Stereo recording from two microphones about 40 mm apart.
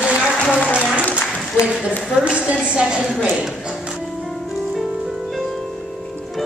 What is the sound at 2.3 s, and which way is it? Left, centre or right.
Speech, right.